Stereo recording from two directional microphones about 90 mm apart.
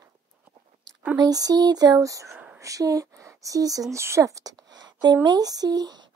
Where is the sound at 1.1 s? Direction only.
45° right (ahead or behind).